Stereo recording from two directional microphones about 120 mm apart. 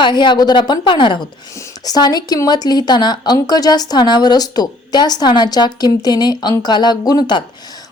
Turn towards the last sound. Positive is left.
turn(degrees=35)  # may be behind; listen again after turning